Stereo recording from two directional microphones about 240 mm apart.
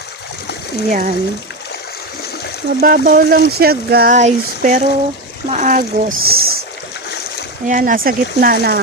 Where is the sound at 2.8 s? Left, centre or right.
Right.